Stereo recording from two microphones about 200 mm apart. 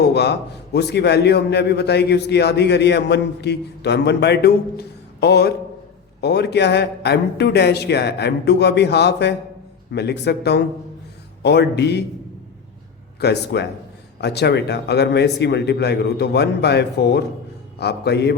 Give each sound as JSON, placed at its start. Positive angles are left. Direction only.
{"t": 0.0, "sound": "a man's voice", "side_deg": 55}
{"t": 13.1, "sound": "a man's voice", "side_deg": 55}